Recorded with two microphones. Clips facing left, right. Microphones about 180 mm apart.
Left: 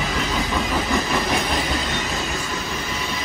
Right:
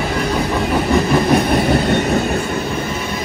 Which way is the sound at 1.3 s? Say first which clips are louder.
Right 9 dB; 60° right (ahead or behind).